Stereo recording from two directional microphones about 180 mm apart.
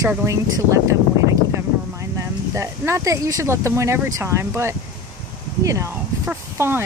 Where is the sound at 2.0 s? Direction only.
15° right (ahead or behind).